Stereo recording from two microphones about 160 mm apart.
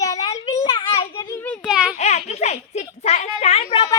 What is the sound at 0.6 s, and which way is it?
Child singing, 35° left (ahead or behind).